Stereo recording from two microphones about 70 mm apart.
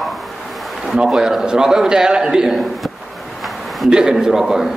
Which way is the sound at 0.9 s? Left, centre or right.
Centre.